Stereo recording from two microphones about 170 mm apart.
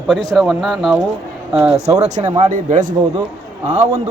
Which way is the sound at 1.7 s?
40° right (ahead or behind).